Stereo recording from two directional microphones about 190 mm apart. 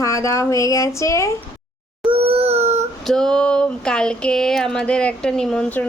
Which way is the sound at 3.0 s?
Centre (ahead or behind).